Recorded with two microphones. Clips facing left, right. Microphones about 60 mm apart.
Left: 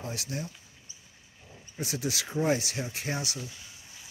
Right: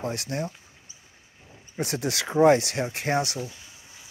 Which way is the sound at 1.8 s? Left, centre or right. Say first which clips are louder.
Right 5 dB; right.